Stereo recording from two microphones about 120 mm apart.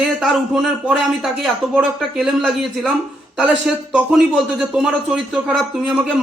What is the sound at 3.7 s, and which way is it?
A man's voice, 5° right (ahead or behind).